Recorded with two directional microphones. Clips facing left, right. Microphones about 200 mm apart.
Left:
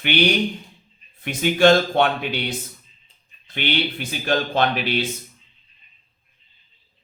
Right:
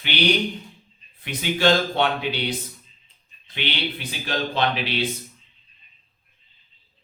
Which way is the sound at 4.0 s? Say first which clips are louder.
Left 5 dB; 50° left (ahead or behind).